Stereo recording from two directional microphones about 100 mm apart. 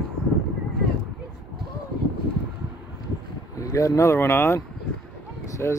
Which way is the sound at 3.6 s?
35° left (ahead or behind).